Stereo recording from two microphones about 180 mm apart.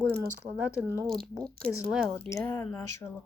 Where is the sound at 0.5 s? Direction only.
5° right (ahead or behind).